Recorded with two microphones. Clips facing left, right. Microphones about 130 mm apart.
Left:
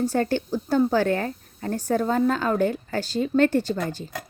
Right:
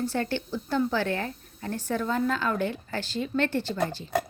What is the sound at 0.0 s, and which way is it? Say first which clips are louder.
Speech: left 6 dB; 45° left (ahead or behind).